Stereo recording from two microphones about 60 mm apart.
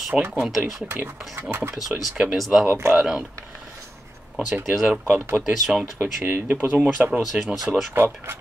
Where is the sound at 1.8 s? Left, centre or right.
Centre.